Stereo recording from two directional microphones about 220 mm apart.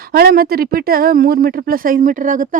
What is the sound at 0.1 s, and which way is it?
Speech, 40° right (ahead or behind).